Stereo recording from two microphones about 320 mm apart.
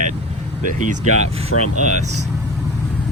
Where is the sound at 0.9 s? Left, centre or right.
Right.